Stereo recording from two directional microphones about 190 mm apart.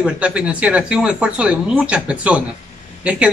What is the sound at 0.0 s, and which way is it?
Speech, 5° right (ahead or behind).